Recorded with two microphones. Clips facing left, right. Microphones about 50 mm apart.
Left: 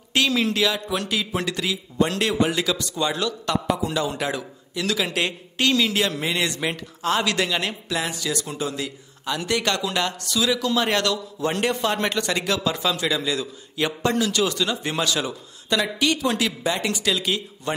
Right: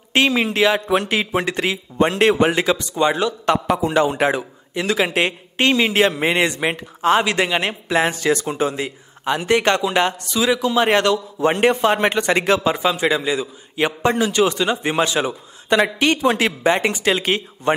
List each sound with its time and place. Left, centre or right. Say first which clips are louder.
0.1 s a man's voice: right 4 dB; right